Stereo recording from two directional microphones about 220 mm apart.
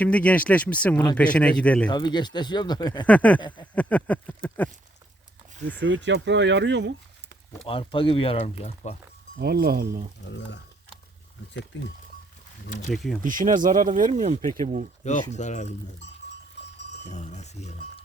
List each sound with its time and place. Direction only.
0.0 s a man's voice: 5° left (ahead or behind)
1.9 s speech: 20° left (ahead or behind)
3.1 s speech: 5° left (ahead or behind)
5.8 s speech: 55° right (ahead or behind)
7.7 s speech: 25° left (ahead or behind)
9.4 s speech: 45° right (ahead or behind)
10.2 s speech: 50° left (ahead or behind)
11.7 s speech: 55° left (ahead or behind)
12.9 s a man's voice: centre (ahead or behind)
13.2 s speech: 35° right (ahead or behind)
15.0 s speech: 30° left (ahead or behind)
17.1 s speech: 30° left (ahead or behind)